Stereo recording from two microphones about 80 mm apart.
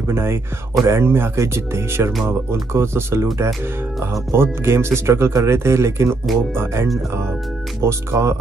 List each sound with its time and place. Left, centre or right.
0.1 s speech: right
4.3 s speech: right